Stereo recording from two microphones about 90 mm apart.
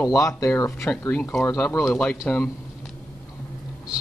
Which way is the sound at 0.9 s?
15° left (ahead or behind).